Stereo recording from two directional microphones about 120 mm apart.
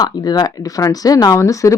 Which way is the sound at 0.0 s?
35° left (ahead or behind).